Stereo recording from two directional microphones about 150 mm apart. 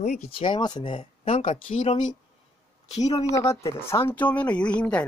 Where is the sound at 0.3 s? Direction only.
35° left (ahead or behind).